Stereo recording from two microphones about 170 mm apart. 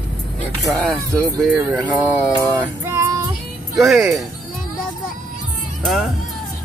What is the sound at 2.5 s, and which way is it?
Female singing, 20° right (ahead or behind).